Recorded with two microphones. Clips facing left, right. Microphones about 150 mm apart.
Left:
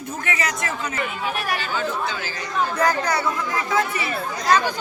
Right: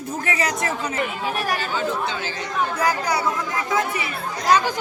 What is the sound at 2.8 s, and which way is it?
Speech, 10° right (ahead or behind).